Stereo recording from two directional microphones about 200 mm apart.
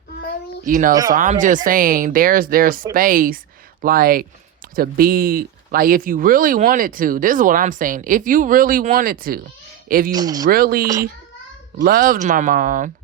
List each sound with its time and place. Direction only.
0.6 s speech: 40° right (ahead or behind)
10.1 s speech: 20° right (ahead or behind)
10.4 s speech: 45° right (ahead or behind)